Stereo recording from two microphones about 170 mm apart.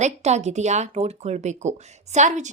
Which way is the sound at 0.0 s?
40° right (ahead or behind).